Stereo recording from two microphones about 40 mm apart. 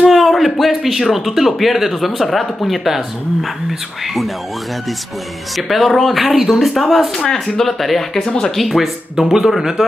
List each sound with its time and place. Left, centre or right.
0.1 s speech: centre
5.6 s speech: centre
8.2 s speech: left
8.5 s speech: centre